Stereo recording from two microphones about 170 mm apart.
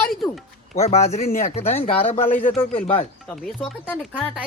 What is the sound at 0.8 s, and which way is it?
Speech, 40° left (ahead or behind).